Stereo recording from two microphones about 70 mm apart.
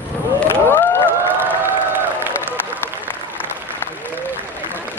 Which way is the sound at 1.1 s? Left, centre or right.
Right.